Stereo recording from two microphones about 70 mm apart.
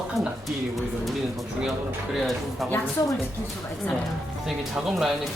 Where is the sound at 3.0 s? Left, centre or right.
Left.